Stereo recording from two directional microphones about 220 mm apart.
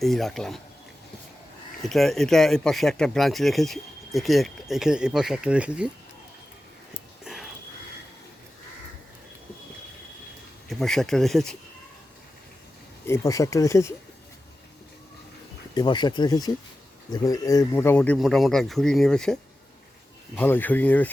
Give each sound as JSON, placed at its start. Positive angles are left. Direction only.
{"t": 0.0, "sound": "speech", "side_deg": 0}
{"t": 1.8, "sound": "speech", "side_deg": 0}
{"t": 10.7, "sound": "speech", "side_deg": 0}
{"t": 13.1, "sound": "speech", "side_deg": 15}
{"t": 15.7, "sound": "speech", "side_deg": 20}